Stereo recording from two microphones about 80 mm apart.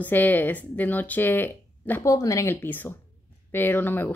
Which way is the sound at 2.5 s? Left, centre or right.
Left.